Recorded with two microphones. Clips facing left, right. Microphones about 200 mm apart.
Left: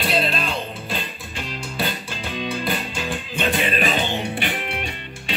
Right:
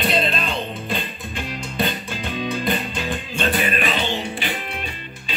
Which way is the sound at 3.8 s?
45° left (ahead or behind).